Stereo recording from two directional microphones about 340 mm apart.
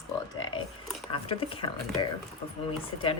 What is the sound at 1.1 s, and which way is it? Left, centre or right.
Speech, centre.